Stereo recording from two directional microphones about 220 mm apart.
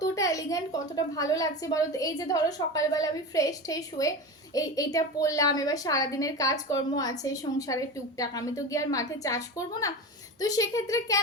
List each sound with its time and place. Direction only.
0.0 s a woman's voice: 15° left (ahead or behind)